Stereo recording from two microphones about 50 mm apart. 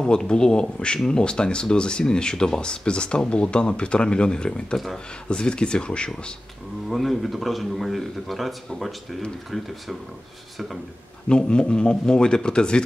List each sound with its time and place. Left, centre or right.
0.0 s speech: centre
4.7 s a man's voice: centre
5.3 s speech: centre
6.9 s a man's voice: centre
11.2 s speech: centre